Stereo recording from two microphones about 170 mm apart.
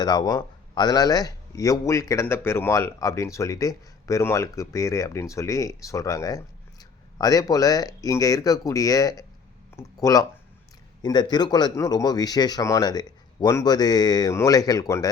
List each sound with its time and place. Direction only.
0.0 s speech: 25° left (ahead or behind)